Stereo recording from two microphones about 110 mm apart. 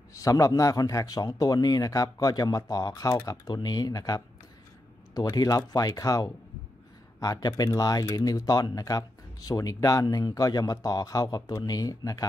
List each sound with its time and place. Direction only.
0.1 s speech: 30° left (ahead or behind)